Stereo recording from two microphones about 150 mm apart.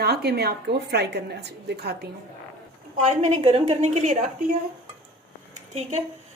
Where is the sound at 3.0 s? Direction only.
50° right (ahead or behind).